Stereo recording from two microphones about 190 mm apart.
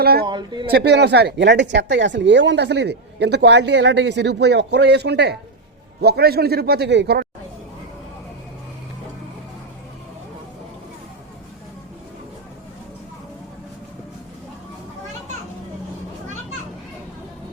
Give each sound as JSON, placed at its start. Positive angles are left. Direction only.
{"t": 0.0, "sound": "a sound", "side_deg": -55}
{"t": 0.3, "sound": "speech", "side_deg": -25}
{"t": 0.7, "sound": "speech", "side_deg": -60}